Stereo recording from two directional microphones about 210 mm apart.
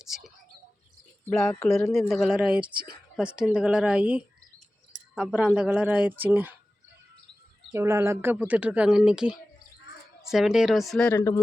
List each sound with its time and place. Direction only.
0.0 s speech: centre (ahead or behind)
2.7 s a woman's voice: 45° right (ahead or behind)
3.2 s speech: 5° right (ahead or behind)
7.7 s speech: 10° right (ahead or behind); by 11.3 s 10° left (ahead or behind)